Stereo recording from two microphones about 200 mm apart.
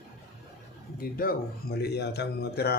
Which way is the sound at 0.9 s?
45° left (ahead or behind).